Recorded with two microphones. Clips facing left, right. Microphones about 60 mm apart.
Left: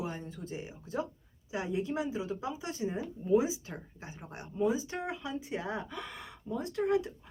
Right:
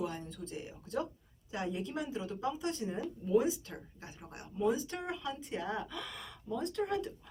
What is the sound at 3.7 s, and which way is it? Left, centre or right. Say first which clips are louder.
Speech: left 3 dB; left.